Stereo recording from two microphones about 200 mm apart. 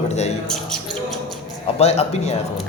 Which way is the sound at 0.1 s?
35° left (ahead or behind).